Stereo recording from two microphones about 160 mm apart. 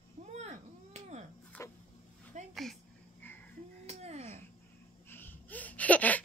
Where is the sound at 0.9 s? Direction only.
45° right (ahead or behind).